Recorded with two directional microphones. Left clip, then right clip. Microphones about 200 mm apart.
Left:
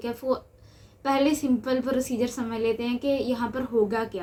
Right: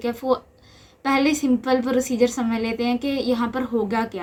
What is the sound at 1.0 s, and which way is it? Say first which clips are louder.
A woman's voice: right 3 dB; 40° right (ahead or behind).